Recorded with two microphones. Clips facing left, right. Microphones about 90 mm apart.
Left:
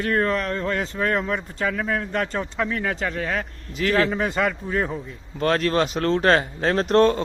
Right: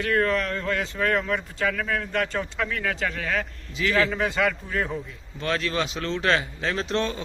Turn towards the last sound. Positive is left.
turn(degrees=45)  # may be behind; listen again after turning